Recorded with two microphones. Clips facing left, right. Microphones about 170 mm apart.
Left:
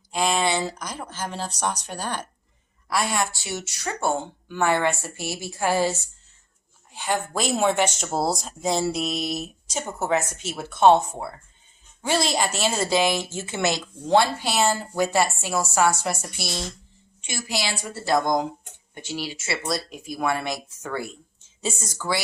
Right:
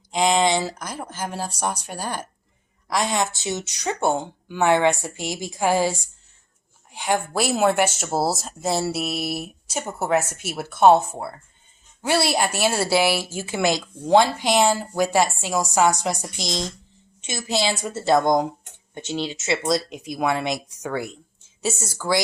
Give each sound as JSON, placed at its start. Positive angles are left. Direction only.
{"t": 0.1, "sound": "speech", "side_deg": -15}
{"t": 21.6, "sound": "speech", "side_deg": -5}